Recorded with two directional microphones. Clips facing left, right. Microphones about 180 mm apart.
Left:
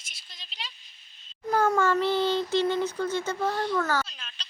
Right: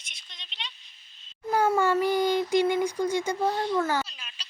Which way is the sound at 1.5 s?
10° right (ahead or behind).